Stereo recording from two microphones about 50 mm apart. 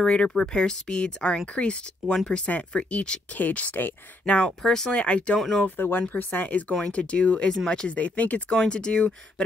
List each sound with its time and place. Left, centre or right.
0.0 s speech: centre; by 3.9 s left
4.3 s speech: left
4.6 s speech: centre
5.0 s speech: left
5.4 s speech: centre
5.8 s speech: left
6.8 s speech: left
7.9 s speech: left
8.5 s speech: centre